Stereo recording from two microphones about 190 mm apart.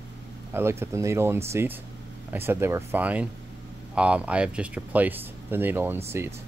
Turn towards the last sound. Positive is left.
turn(degrees=-15)  # may be behind; listen again after turning